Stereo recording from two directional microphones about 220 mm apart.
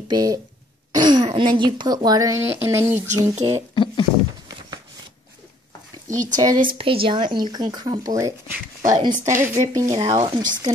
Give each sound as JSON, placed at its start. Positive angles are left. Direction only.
{"t": 0.1, "sound": "a woman's voice", "side_deg": -15}
{"t": 3.1, "sound": "speech", "side_deg": -30}
{"t": 3.7, "sound": "speech", "side_deg": 20}
{"t": 6.3, "sound": "a woman's voice", "side_deg": -15}